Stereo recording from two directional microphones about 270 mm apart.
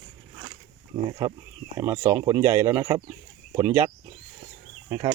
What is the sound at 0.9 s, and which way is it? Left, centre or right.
Speech, centre.